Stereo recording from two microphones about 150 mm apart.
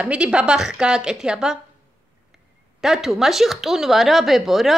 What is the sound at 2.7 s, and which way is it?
Speech, centre (ahead or behind).